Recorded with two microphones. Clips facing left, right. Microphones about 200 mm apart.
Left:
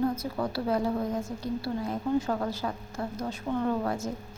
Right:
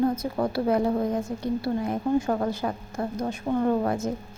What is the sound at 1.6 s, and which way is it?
A woman's voice, 55° right (ahead or behind).